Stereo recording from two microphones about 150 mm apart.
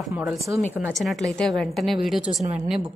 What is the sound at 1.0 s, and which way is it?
A woman's voice, centre (ahead or behind).